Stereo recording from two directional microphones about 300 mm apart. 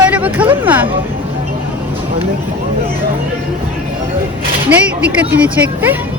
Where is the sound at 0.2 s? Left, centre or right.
Centre.